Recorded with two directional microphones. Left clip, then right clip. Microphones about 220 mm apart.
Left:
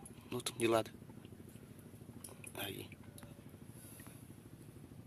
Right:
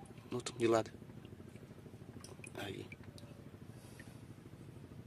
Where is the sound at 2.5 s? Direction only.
5° right (ahead or behind).